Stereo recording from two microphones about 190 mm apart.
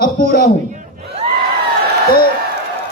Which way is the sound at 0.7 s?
30° right (ahead or behind).